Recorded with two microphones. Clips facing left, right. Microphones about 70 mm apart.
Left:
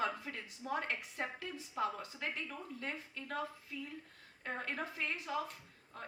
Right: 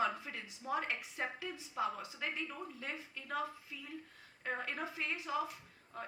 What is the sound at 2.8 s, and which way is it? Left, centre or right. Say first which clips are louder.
Speech: left 1 dB; left.